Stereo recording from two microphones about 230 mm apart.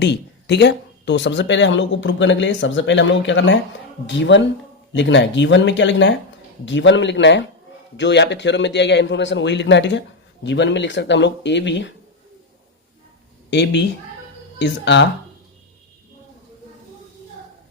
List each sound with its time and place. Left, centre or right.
0.0 s speech: left
13.5 s speech: left